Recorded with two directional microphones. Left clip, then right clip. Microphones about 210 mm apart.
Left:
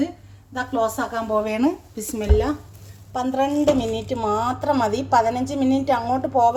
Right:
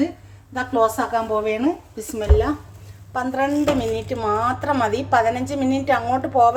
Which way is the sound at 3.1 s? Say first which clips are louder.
Even; 10° left (ahead or behind).